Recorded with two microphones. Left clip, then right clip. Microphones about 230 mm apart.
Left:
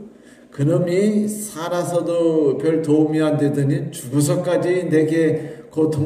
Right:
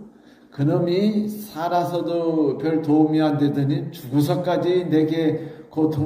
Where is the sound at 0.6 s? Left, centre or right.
Right.